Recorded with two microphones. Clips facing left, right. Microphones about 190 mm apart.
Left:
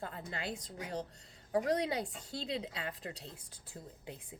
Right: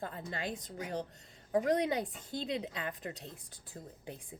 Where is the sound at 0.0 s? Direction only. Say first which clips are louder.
Right 2 dB; 45° right (ahead or behind).